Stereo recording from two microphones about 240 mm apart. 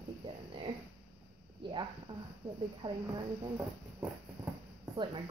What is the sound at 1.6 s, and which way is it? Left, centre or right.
Speech, centre.